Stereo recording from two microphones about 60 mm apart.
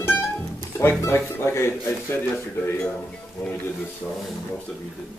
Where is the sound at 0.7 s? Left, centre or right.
Left.